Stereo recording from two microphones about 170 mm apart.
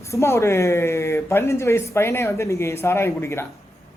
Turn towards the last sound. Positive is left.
turn(degrees=15)  # may be behind; listen again after turning